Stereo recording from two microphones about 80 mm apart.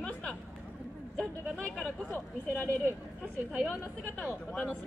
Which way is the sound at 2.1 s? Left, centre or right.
Centre.